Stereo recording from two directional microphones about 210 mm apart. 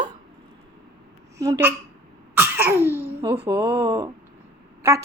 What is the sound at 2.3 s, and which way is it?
Cough, 10° right (ahead or behind).